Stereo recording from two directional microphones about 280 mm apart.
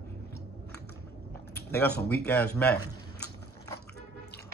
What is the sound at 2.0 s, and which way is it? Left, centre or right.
Speech, left.